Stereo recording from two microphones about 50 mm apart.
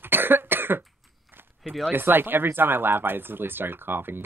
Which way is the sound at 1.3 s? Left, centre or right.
Right.